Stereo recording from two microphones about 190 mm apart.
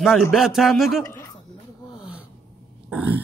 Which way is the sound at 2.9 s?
10° right (ahead or behind).